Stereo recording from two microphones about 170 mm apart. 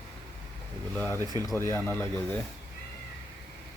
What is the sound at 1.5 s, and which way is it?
Speech, 15° left (ahead or behind).